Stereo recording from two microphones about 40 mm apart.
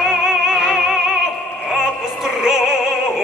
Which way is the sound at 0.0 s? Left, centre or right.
Centre.